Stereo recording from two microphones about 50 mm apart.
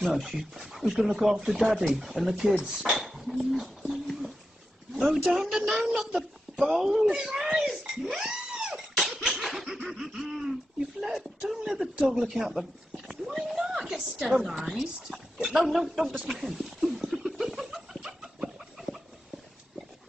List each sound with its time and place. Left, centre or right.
0.0 s speech: centre
3.9 s a sound: centre
4.9 s speech: centre
7.6 s sneeze: centre
9.3 s laughter: centre
11.0 s a sound: centre
14.1 s a woman's voice: right
14.7 s a woman's voice: centre
17.0 s a sound: centre